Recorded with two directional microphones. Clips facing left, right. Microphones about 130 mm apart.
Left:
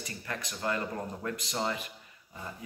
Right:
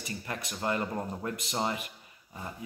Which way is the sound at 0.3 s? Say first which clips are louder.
Right 1 dB; 25° right (ahead or behind).